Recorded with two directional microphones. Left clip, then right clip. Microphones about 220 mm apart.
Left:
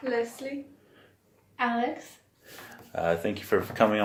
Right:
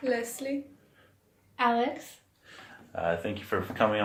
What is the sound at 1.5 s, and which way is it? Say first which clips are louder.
Speech: right 2 dB; 50° right (ahead or behind).